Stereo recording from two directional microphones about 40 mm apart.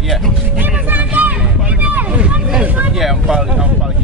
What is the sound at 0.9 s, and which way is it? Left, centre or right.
Music, right.